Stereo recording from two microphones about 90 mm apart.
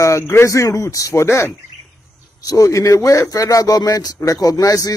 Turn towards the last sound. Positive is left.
turn(degrees=45)  # may be behind; listen again after turning